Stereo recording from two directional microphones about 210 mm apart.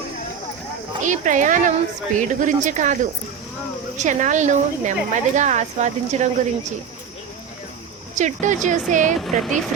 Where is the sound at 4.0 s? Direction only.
35° right (ahead or behind).